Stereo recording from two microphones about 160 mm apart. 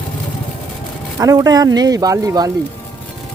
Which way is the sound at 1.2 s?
25° right (ahead or behind).